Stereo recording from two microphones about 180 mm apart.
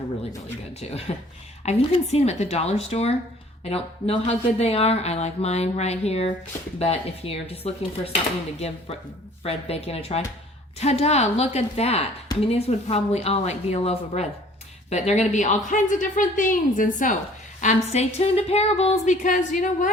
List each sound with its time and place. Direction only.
0.8 s speech: 35° left (ahead or behind)
9.4 s a woman's voice: 35° left (ahead or behind)